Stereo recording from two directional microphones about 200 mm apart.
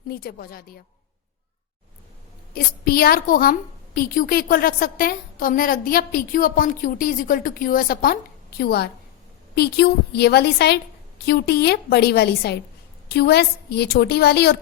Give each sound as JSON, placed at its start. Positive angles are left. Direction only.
{"t": 0.1, "sound": "a woman's voice", "side_deg": 50}
{"t": 2.8, "sound": "a woman's voice", "side_deg": 50}